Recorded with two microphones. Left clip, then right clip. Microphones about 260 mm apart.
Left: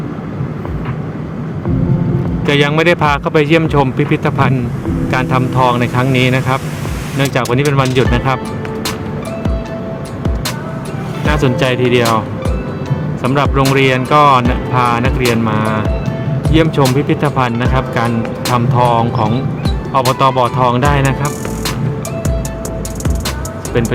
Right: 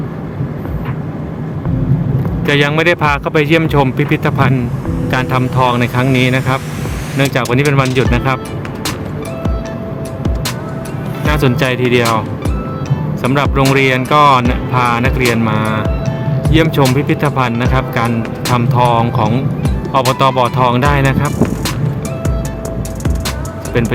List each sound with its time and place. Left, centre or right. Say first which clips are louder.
2.5 s speech: even; centre
11.3 s speech: even; centre
13.2 s speech: even; centre